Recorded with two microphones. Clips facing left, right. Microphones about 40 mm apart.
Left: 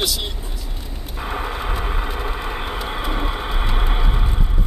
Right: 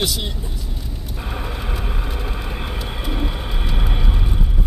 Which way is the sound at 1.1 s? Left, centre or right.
Centre.